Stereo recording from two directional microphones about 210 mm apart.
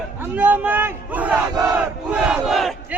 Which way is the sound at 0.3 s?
10° right (ahead or behind).